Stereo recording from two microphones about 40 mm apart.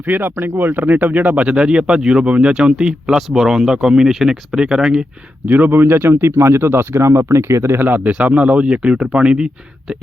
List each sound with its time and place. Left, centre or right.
0.1 s speech: right
1.2 s speech: right; by 2.2 s centre
2.2 s speech: right
2.6 s speech: right
5.5 s speech: right
5.8 s speech: right
7.9 s speech: right